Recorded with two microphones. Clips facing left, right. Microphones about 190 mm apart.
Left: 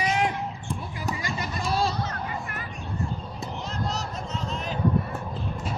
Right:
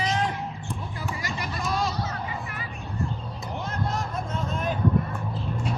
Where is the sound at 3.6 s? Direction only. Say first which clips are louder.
Right 2 dB; 55° right (ahead or behind).